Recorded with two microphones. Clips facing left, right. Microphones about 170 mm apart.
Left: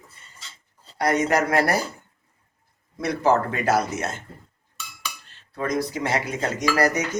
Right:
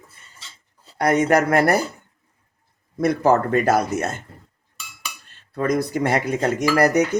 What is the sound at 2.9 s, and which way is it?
Speech, 50° right (ahead or behind).